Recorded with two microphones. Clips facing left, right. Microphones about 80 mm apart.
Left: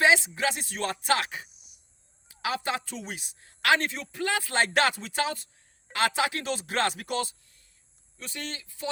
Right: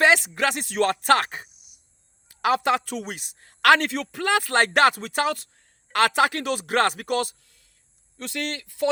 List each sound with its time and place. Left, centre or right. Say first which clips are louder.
0.0 s speech: right 3 dB; right
2.4 s speech: right 9 dB; right